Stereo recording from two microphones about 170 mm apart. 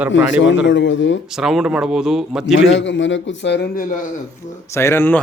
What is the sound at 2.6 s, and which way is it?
A man's voice, 90° left.